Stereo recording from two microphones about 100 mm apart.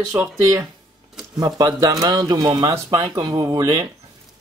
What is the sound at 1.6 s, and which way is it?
Speech, 40° right (ahead or behind).